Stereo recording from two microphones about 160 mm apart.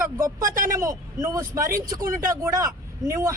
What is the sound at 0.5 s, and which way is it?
Speech, 60° right (ahead or behind).